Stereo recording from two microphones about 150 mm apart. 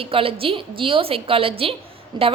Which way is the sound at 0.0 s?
35° right (ahead or behind).